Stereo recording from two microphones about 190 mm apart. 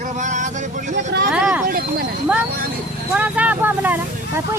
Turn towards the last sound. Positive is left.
turn(degrees=-10)  # may be behind; listen again after turning